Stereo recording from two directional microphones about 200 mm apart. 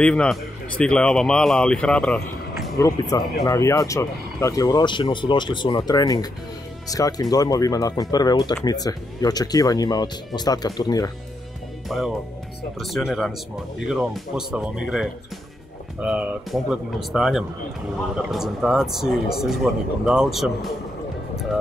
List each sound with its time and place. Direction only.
0.0 s a man's voice: 5° left (ahead or behind)
3.1 s speech: 15° left (ahead or behind)
11.9 s a man's voice: centre (ahead or behind)